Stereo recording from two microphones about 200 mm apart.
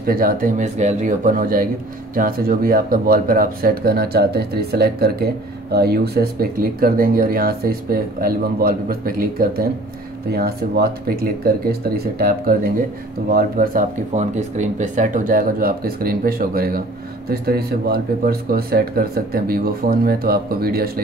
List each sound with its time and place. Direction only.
0.0 s speech: 45° right (ahead or behind)